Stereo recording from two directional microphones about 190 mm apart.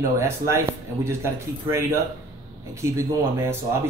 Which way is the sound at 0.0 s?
15° right (ahead or behind).